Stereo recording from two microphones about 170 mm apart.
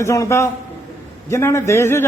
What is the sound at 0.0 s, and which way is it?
A man's voice, 15° left (ahead or behind).